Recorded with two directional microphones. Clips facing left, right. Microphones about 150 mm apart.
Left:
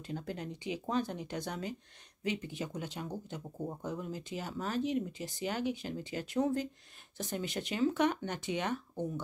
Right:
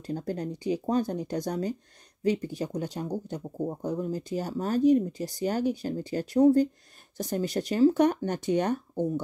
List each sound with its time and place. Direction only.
0.0 s speech: 40° right (ahead or behind)